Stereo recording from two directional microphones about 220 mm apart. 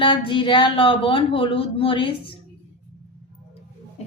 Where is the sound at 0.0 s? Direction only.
25° left (ahead or behind).